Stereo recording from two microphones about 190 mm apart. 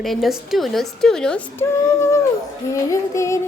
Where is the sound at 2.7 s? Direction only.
15° left (ahead or behind).